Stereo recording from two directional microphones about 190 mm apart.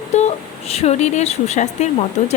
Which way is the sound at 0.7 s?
35° left (ahead or behind).